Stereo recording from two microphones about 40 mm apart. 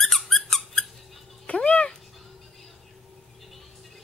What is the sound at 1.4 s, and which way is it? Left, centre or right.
Cat, left.